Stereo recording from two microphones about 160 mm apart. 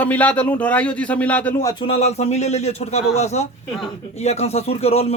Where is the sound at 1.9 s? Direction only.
40° left (ahead or behind).